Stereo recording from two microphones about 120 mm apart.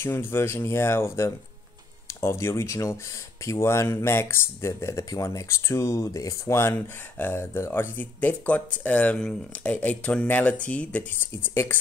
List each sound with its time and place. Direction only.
0.0 s speech: 20° left (ahead or behind)